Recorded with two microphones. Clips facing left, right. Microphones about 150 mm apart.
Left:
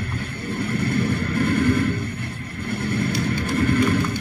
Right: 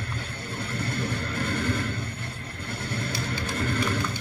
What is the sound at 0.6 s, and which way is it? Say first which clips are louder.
Vehicle: left 8 dB; 55° left (ahead or behind).